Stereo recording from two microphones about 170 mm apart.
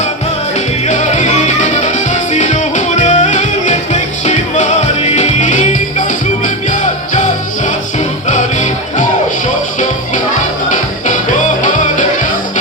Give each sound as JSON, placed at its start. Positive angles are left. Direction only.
{"t": 0.9, "sound": "music", "side_deg": 45}